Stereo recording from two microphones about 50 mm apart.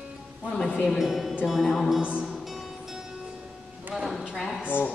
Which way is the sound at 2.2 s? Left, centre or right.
Centre.